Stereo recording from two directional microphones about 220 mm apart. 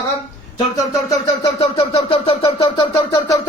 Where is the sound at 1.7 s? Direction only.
20° left (ahead or behind).